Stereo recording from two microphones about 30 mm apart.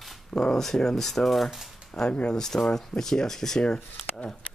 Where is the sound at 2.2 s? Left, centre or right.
Centre.